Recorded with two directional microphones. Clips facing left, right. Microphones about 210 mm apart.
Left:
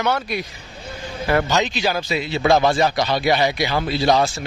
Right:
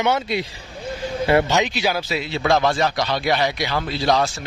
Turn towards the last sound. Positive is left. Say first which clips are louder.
# left 2 dB
turn(degrees=5)  # may be behind; listen again after turning